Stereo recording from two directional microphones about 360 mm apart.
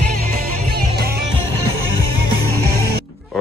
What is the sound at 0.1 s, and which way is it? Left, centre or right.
Music, right.